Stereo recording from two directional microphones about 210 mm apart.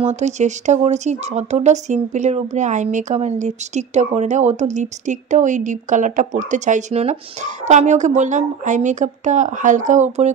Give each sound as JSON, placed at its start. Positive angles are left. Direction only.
{"t": 0.0, "sound": "speech", "side_deg": -30}